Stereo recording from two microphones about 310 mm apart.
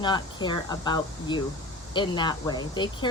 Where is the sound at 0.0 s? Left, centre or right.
Centre.